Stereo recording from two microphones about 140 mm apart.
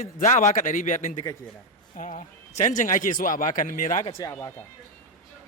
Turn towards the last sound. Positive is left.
turn(degrees=20)  # may be behind; listen again after turning